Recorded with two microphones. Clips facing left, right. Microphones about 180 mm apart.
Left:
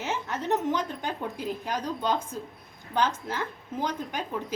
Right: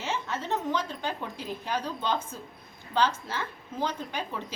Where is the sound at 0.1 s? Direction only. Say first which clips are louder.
Left 3 dB; 15° left (ahead or behind).